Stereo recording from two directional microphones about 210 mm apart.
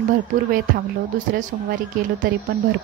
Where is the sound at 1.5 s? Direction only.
35° right (ahead or behind).